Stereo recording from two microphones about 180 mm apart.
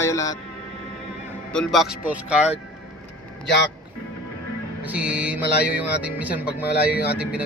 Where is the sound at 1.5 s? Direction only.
Centre (ahead or behind).